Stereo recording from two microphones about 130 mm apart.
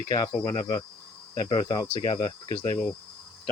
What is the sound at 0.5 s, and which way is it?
Speech, 40° left (ahead or behind).